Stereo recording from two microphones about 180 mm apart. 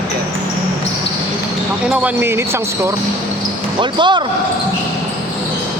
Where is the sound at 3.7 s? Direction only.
25° right (ahead or behind).